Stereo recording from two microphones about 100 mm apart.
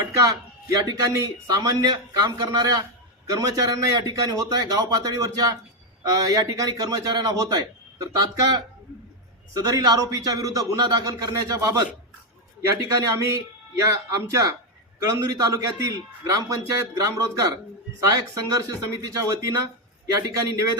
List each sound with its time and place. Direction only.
0.2 s a man's voice: 35° right (ahead or behind)
13.0 s a man's voice: 35° right (ahead or behind)